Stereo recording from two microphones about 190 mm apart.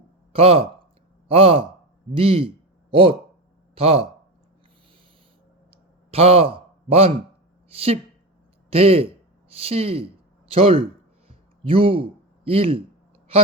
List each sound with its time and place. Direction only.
0.3 s speech: 30° right (ahead or behind)
6.1 s speech: 30° right (ahead or behind)
11.3 s a sound: 30° right (ahead or behind)
12.5 s speech: 30° right (ahead or behind)